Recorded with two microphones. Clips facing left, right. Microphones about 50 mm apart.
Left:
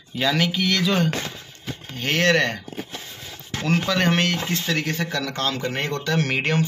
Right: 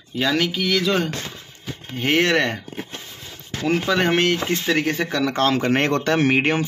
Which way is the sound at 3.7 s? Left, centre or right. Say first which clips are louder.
Right 2 dB; centre.